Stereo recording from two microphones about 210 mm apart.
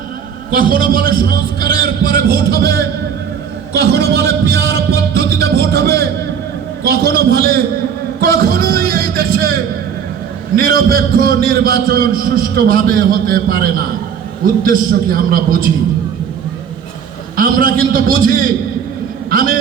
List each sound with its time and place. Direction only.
0.5 s a man's voice: 45° right (ahead or behind)
4.7 s a man's voice: 50° right (ahead or behind)
17.3 s a man's voice: 40° right (ahead or behind)